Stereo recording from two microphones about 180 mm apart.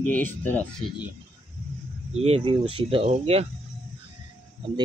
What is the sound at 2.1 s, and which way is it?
Speech, 35° right (ahead or behind).